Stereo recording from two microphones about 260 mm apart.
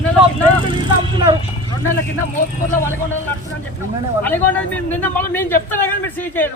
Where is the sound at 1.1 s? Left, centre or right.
Centre.